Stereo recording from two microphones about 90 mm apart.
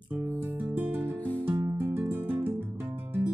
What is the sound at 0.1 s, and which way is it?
Music, 20° right (ahead or behind).